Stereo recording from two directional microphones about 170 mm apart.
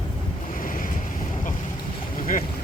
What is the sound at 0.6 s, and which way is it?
Waves, 55° left (ahead or behind).